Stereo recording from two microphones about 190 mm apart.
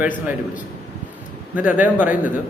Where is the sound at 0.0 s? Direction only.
10° right (ahead or behind).